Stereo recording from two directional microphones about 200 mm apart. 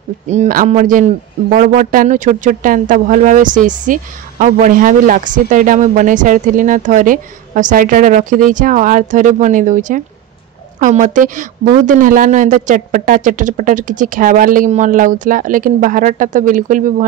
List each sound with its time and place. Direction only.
0.3 s a man's voice: 40° right (ahead or behind)